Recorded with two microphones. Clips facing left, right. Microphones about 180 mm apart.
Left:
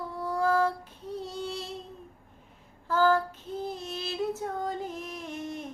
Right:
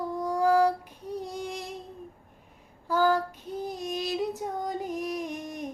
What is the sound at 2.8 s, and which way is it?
Female singing, 15° right (ahead or behind).